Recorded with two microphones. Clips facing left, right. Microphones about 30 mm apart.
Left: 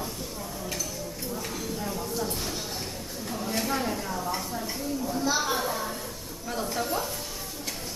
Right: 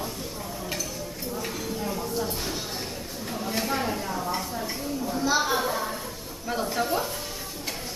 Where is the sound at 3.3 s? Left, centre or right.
Centre.